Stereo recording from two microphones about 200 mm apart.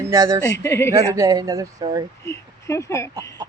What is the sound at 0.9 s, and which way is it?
Speech, 15° right (ahead or behind).